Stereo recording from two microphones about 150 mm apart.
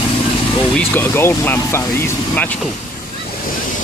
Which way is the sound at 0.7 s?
15° left (ahead or behind).